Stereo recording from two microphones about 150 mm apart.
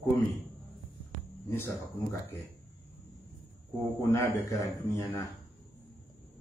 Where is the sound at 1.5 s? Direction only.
15° left (ahead or behind).